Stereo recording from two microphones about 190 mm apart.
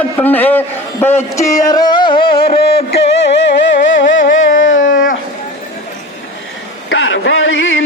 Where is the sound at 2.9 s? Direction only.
65° left (ahead or behind).